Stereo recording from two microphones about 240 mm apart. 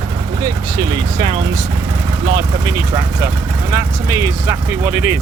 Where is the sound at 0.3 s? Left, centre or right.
Centre.